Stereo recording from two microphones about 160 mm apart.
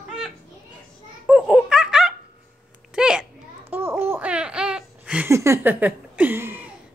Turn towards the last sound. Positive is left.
turn(degrees=-15)  # may be behind; listen again after turning